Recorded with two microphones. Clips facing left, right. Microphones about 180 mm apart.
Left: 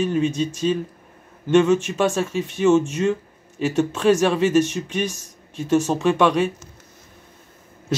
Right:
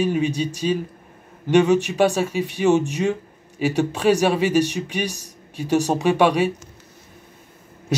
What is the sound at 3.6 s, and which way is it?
Speech, 10° right (ahead or behind).